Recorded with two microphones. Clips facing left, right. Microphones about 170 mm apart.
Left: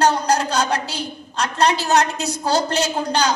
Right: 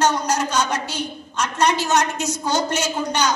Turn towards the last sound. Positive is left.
turn(degrees=35)  # may be behind; listen again after turning